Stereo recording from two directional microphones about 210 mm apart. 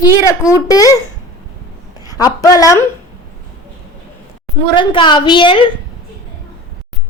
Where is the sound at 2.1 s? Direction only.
15° left (ahead or behind).